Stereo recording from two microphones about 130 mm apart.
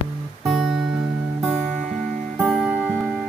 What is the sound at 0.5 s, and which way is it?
Guitar, 5° right (ahead or behind).